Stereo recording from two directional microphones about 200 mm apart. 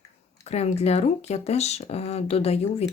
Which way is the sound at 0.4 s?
30° left (ahead or behind).